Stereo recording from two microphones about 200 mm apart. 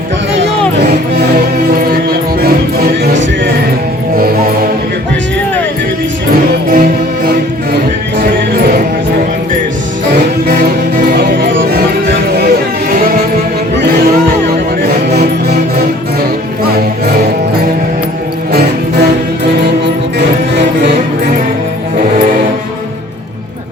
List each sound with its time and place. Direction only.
1.4 s music: 50° right (ahead or behind)
6.7 s music: 50° right (ahead or behind)
10.4 s music: 50° right (ahead or behind)
13.7 s music: 55° right (ahead or behind)
18.5 s music: 55° right (ahead or behind)